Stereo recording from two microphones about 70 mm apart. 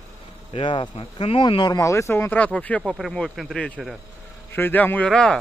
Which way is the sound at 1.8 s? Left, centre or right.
Left.